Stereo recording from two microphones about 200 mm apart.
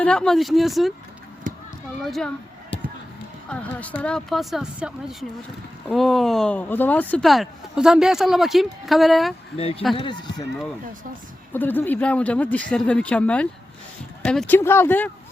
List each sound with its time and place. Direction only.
0.0 s speech: 5° left (ahead or behind)
1.5 s run: 45° right (ahead or behind)
2.0 s speech: centre (ahead or behind)
3.5 s speech: 5° left (ahead or behind)
9.6 s speech: 30° left (ahead or behind)
11.5 s speech: 10° left (ahead or behind)